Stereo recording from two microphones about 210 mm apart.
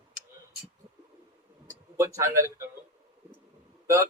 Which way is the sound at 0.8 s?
25° right (ahead or behind).